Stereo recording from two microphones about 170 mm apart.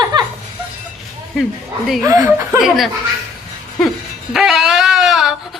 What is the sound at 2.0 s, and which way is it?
Speech, 15° right (ahead or behind).